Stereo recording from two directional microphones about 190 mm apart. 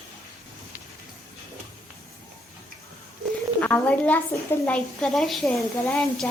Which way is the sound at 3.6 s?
10° left (ahead or behind).